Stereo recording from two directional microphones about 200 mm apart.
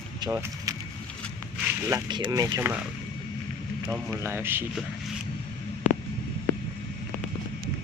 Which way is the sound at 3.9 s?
10° right (ahead or behind).